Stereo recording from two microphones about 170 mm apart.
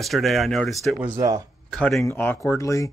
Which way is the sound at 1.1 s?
20° right (ahead or behind).